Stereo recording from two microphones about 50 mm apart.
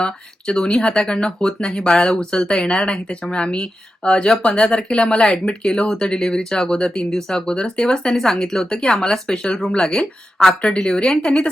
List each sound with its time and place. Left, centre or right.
0.0 s speech: centre